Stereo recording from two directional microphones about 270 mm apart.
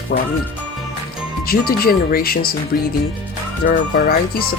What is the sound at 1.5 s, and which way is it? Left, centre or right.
Speech, left.